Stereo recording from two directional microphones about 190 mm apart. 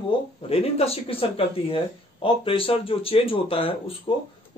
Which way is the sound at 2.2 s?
30° left (ahead or behind).